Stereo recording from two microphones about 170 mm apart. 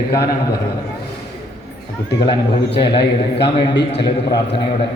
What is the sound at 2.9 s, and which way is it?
A man's voice, 75° left (ahead or behind).